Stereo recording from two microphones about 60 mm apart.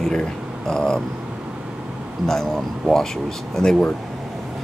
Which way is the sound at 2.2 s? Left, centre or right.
Centre.